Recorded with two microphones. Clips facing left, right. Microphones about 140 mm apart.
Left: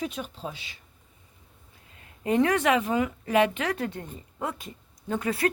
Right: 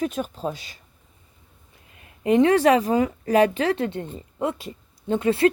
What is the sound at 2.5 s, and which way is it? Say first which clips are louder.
Speech: right 6 dB; 35° right (ahead or behind).